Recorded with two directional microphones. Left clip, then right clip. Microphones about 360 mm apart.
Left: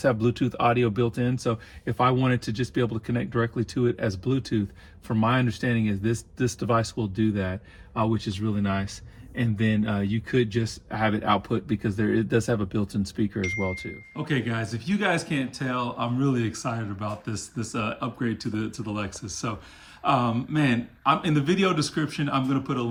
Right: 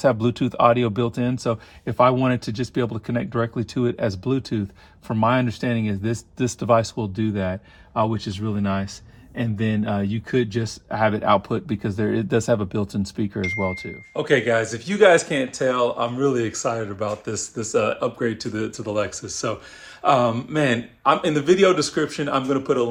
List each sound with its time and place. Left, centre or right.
0.0 s speech: centre
7.9 s speech: centre
14.2 s a man's voice: centre